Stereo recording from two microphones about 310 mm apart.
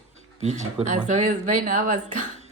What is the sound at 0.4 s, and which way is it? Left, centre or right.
Speech, right.